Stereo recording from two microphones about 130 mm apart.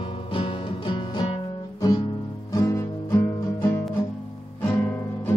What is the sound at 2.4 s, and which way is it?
Music, 25° left (ahead or behind).